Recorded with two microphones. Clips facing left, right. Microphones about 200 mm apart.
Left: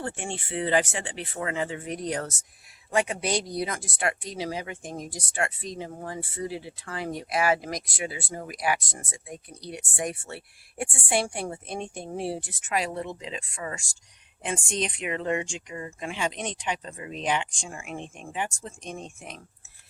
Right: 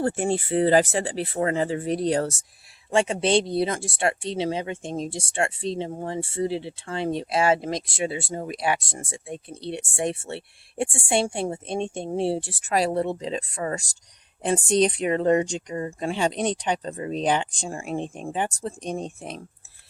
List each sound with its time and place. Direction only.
0.0 s speech: 40° right (ahead or behind)